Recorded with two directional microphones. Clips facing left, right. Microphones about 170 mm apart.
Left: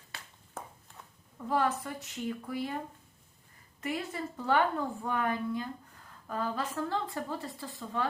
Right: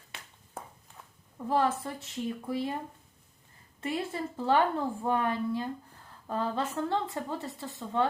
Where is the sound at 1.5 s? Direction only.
25° right (ahead or behind).